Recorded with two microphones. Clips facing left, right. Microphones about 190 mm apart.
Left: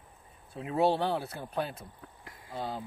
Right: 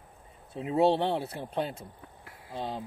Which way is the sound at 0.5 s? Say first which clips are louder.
Right 3 dB; 25° right (ahead or behind).